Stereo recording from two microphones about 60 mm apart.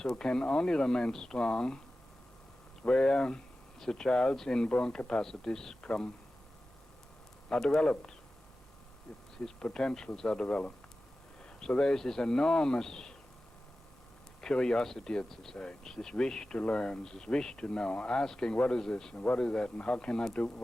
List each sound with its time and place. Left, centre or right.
0.0 s speech: centre
2.8 s speech: centre
7.5 s speech: centre
9.4 s speech: centre
14.4 s speech: centre
19.1 s speech: left